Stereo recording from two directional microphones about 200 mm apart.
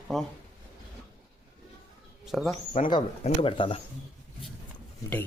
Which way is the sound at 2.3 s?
Centre (ahead or behind).